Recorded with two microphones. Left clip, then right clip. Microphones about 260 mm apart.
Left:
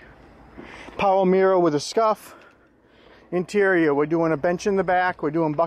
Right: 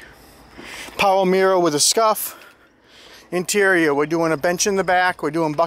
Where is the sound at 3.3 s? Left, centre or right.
Centre.